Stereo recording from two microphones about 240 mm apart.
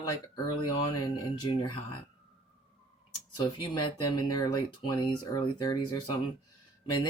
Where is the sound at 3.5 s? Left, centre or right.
Centre.